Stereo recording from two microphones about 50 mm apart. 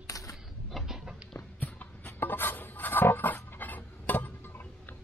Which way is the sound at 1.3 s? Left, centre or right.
Left.